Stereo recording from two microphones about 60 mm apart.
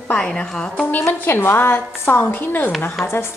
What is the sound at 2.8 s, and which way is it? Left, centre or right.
Speech, left.